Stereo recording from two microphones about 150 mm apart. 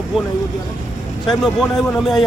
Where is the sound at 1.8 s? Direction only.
Centre (ahead or behind).